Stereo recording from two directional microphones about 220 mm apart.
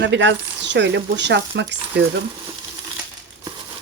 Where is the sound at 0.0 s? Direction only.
55° right (ahead or behind).